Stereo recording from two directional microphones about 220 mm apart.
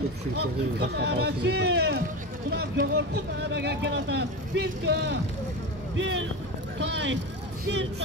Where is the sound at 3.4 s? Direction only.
50° right (ahead or behind).